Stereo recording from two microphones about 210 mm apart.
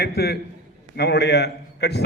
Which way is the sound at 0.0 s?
50° left (ahead or behind).